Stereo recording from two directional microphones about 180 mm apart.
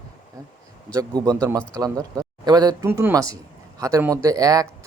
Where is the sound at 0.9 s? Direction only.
20° right (ahead or behind).